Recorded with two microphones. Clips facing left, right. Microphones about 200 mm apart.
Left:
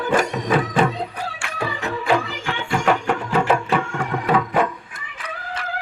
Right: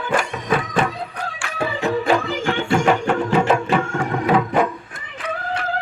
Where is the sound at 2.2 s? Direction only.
45° right (ahead or behind).